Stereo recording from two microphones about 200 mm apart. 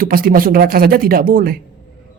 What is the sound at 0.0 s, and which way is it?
A woman's voice, 45° right (ahead or behind).